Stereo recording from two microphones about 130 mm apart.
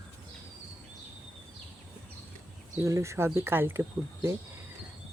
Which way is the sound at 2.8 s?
25° right (ahead or behind).